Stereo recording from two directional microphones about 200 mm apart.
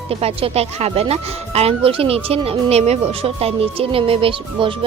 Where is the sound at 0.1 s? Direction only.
30° right (ahead or behind).